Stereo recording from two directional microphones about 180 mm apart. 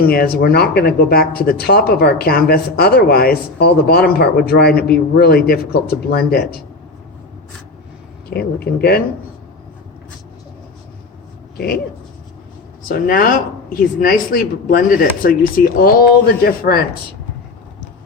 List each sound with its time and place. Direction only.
0.0 s speech: 55° left (ahead or behind)
8.3 s speech: 60° left (ahead or behind)
11.5 s speech: 60° left (ahead or behind)
12.9 s speech: 55° left (ahead or behind)